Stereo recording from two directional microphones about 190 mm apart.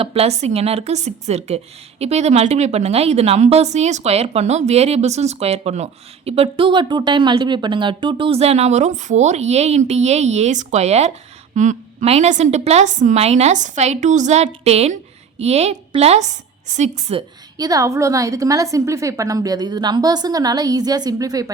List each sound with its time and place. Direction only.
0.0 s a woman's voice: 30° right (ahead or behind)
17.6 s a woman's voice: 20° right (ahead or behind)